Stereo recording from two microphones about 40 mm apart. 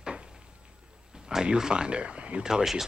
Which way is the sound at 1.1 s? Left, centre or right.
Centre.